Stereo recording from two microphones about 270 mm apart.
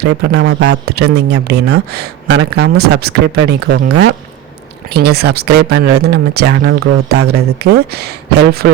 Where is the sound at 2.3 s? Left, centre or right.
Right.